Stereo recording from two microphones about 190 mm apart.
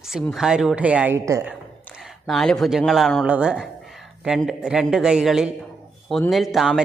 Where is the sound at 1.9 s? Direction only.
Centre (ahead or behind).